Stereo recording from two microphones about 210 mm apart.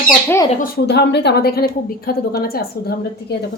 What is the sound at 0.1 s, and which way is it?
Speech, 10° left (ahead or behind).